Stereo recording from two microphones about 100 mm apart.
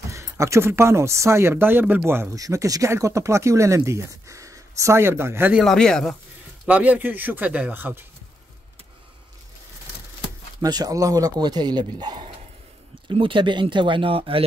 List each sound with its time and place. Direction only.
0.1 s speech: 30° right (ahead or behind)
2.4 s speech: 35° right (ahead or behind)
5.7 s speech: 5° left (ahead or behind)
6.6 s speech: 15° right (ahead or behind)
10.6 s speech: 40° right (ahead or behind)
13.1 s speech: 60° right (ahead or behind)